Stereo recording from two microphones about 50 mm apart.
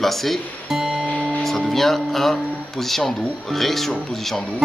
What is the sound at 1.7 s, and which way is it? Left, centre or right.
Speech, centre.